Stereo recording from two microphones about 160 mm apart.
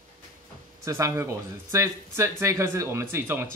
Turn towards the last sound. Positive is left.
turn(degrees=-15)  # may be behind; listen again after turning